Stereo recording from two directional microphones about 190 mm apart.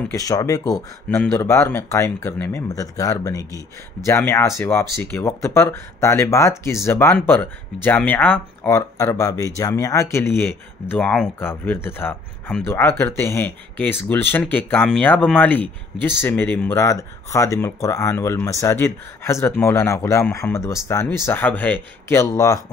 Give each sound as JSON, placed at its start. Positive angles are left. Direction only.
{"t": 0.1, "sound": "speech", "side_deg": 20}